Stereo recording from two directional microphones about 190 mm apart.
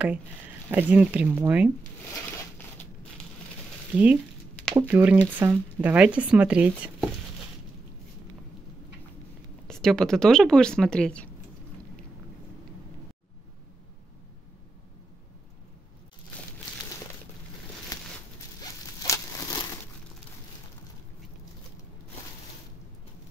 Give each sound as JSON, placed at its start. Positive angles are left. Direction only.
{"t": 0.7, "sound": "speech", "side_deg": -10}
{"t": 3.9, "sound": "speech", "side_deg": -10}
{"t": 9.7, "sound": "speech", "side_deg": 5}
{"t": 18.6, "sound": "a sound", "side_deg": 20}